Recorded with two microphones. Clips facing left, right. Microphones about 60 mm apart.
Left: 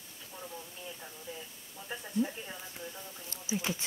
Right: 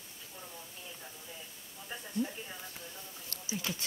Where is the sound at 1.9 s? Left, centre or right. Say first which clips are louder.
Left 3 dB; centre.